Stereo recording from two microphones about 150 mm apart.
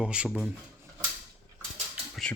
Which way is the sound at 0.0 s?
5° right (ahead or behind).